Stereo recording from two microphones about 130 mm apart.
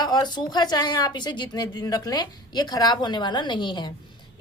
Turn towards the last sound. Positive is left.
turn(degrees=35)  # may be behind; listen again after turning